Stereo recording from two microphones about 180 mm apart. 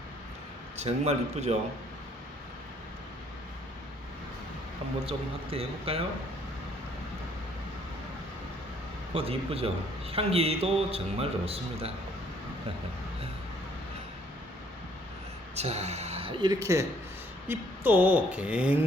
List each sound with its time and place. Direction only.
0.8 s a man's voice: 40° right (ahead or behind)
5.0 s a man's voice: 30° right (ahead or behind)
9.1 s a man's voice: 35° right (ahead or behind)
15.5 s speech: 35° right (ahead or behind); by 18.9 s 5° right (ahead or behind)